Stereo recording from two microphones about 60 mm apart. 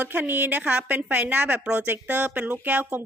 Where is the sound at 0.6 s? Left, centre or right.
Right.